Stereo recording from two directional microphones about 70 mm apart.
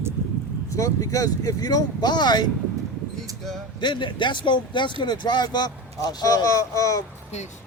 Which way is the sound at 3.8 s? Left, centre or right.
Left.